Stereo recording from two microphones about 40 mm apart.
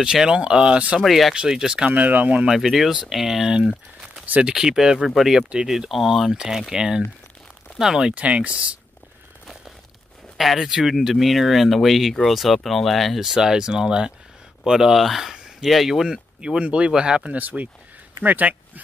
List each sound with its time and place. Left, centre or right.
0.0 s speech: centre
1.0 s speech: centre
1.5 s speech: centre
1.9 s speech: right
2.5 s speech: centre
3.4 s speech: centre
6.3 s speech: centre
8.1 s speech: right
10.3 s speech: centre
13.2 s speech: centre
16.3 s speech: right
17.3 s speech: right